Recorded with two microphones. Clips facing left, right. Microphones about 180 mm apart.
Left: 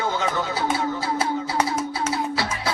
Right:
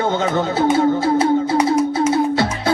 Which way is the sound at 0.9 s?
45° right (ahead or behind).